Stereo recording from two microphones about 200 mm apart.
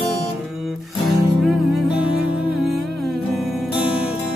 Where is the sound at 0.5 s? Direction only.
Centre (ahead or behind).